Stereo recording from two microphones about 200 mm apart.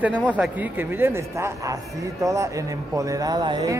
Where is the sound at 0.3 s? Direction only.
10° right (ahead or behind).